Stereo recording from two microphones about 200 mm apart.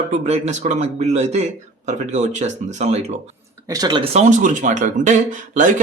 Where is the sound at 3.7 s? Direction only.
20° right (ahead or behind).